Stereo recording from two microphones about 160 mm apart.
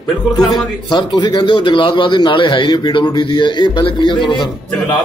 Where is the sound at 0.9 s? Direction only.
30° left (ahead or behind).